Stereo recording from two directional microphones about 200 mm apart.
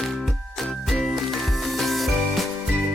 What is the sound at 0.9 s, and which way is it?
Music, centre (ahead or behind).